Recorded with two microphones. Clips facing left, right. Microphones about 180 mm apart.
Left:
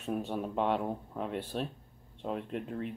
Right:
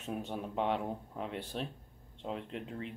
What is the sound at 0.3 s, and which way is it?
Speech, 50° left (ahead or behind).